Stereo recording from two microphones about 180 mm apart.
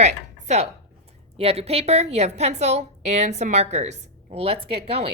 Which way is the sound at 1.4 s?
35° right (ahead or behind).